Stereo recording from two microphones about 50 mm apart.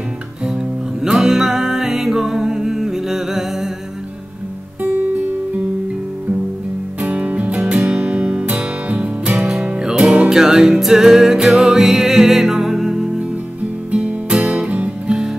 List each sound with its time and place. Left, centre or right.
1.0 s music: centre
7.0 s music: right
10.3 s music: centre
13.9 s music: centre
15.0 s music: centre